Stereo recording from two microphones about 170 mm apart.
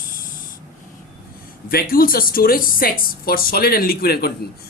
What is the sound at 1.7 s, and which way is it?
A woman's voice, 60° left (ahead or behind).